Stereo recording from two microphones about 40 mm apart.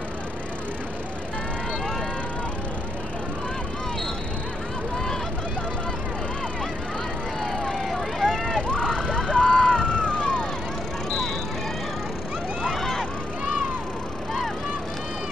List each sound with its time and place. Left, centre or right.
7.9 s vehicle: centre
8.5 s emergency vehicle: left
9.1 s police car: left